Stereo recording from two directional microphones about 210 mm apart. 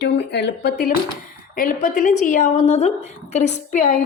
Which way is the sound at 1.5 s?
40° left (ahead or behind).